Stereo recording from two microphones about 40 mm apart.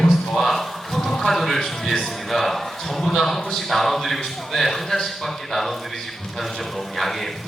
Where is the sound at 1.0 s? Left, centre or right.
Centre.